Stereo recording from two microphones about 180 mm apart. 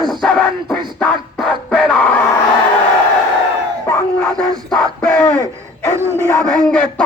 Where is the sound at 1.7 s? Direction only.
5° left (ahead or behind).